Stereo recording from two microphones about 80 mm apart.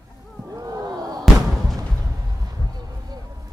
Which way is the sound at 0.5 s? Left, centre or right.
Right.